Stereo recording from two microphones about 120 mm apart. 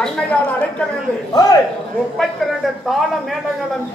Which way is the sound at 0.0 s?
10° left (ahead or behind).